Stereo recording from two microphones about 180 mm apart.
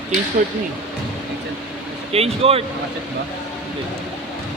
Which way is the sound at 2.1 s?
35° right (ahead or behind).